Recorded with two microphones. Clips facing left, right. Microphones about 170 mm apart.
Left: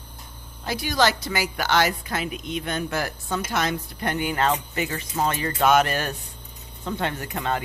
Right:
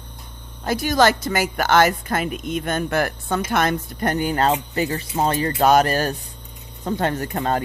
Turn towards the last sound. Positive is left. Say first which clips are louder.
# right 5 dB
turn(degrees=-40)  # may be behind; listen again after turning